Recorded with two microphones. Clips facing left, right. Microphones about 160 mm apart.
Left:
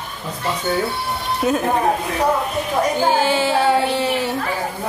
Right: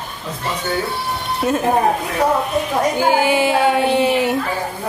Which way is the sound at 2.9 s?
15° right (ahead or behind).